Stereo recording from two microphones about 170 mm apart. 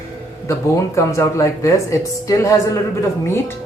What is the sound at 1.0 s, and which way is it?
Speech, 20° left (ahead or behind).